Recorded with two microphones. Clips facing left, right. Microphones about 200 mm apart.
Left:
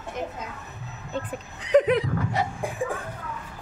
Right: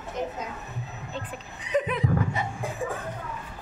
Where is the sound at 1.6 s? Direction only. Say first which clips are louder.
Left 7 dB; 85° left.